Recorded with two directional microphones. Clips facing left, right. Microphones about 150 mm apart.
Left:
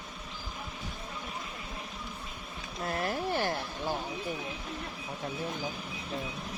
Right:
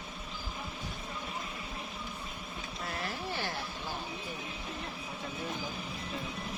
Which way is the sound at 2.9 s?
50° left (ahead or behind).